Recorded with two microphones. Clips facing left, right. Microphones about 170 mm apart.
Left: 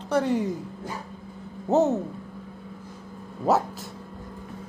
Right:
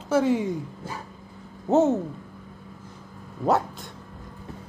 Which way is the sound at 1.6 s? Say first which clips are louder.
Right 1 dB; centre (ahead or behind).